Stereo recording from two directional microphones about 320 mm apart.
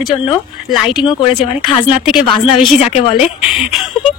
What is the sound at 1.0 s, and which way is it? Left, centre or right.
Speech, centre.